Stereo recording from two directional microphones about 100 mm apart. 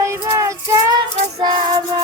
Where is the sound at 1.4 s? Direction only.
45° right (ahead or behind).